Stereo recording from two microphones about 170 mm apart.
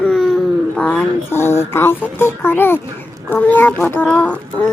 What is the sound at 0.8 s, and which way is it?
A child's voice, 10° left (ahead or behind).